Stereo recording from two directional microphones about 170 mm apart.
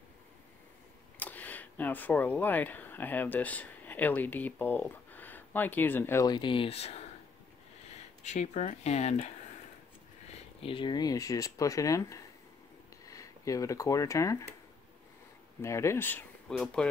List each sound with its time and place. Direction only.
1.2 s speech: 10° left (ahead or behind); by 7.1 s 40° left (ahead or behind)
8.2 s speech: 45° left (ahead or behind)
10.3 s speech: 35° left (ahead or behind)
15.6 s speech: 15° left (ahead or behind)